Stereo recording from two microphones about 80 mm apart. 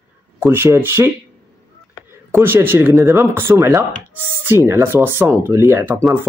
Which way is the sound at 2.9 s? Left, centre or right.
Right.